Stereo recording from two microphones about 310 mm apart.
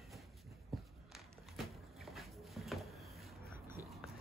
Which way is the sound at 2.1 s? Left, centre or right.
Centre.